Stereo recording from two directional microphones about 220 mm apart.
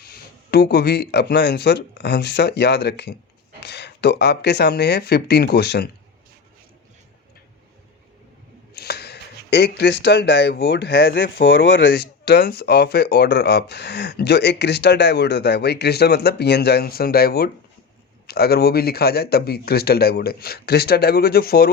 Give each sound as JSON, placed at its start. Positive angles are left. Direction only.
{"t": 0.0, "sound": "speech", "side_deg": 45}
{"t": 8.7, "sound": "speech", "side_deg": 45}